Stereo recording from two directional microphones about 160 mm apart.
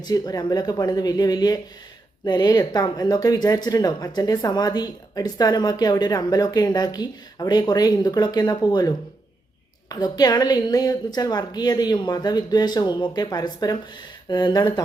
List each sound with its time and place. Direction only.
0.0 s speech: 25° left (ahead or behind)
9.9 s speech: 25° left (ahead or behind)